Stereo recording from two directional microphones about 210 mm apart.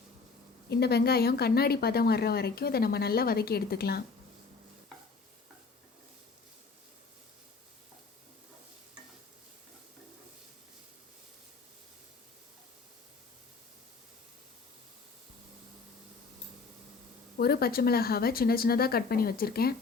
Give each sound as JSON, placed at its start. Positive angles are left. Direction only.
{"t": 0.7, "sound": "speech", "side_deg": 50}
{"t": 17.3, "sound": "speech", "side_deg": 45}